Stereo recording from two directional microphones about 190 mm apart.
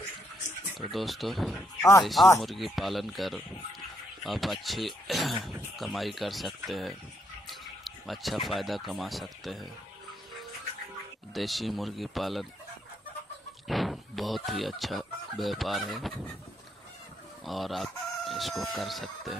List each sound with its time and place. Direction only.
0.7 s speech: centre (ahead or behind)
1.8 s speech: 15° left (ahead or behind)
2.4 s speech: centre (ahead or behind)
11.3 s speech: centre (ahead or behind)
13.7 s speech: centre (ahead or behind)
17.5 s speech: centre (ahead or behind)